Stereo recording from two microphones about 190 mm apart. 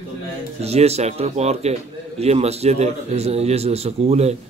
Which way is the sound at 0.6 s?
35° right (ahead or behind).